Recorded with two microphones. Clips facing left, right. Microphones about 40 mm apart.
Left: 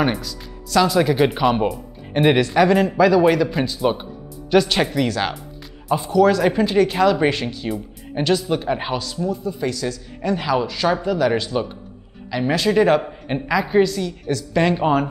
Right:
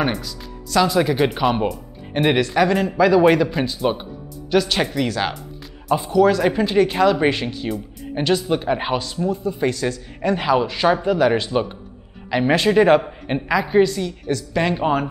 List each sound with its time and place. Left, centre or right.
0.0 s speech: centre
3.1 s speech: centre
13.3 s speech: centre